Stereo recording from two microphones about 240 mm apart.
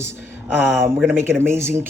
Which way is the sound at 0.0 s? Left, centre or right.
Centre.